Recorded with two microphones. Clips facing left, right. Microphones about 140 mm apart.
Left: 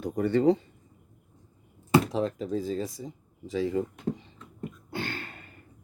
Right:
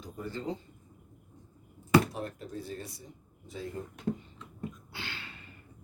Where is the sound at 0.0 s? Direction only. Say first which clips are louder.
Left 15 dB; 70° left (ahead or behind).